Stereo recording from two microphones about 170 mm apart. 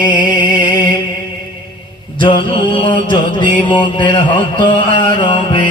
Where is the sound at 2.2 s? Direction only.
30° left (ahead or behind).